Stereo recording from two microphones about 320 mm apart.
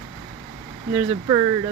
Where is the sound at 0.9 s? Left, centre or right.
Centre.